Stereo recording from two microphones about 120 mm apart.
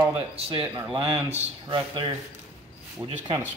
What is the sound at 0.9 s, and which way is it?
Speech, 60° right (ahead or behind).